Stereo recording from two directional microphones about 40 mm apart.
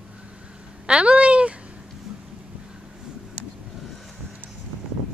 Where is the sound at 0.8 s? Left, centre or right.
Right.